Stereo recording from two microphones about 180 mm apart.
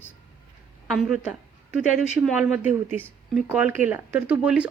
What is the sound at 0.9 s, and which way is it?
A woman's voice, centre (ahead or behind).